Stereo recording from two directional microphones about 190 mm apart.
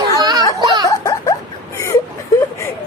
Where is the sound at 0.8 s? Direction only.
20° left (ahead or behind).